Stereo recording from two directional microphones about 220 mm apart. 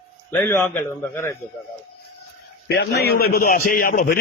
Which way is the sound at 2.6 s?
50° left (ahead or behind).